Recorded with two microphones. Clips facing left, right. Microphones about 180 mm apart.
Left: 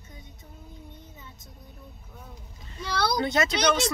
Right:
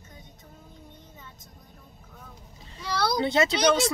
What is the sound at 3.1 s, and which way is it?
Speech, 30° right (ahead or behind).